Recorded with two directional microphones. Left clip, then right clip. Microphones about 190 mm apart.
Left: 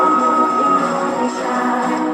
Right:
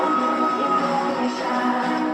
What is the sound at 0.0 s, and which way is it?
Music, 30° left (ahead or behind).